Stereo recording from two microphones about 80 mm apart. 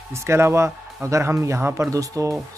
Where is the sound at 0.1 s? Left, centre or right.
Right.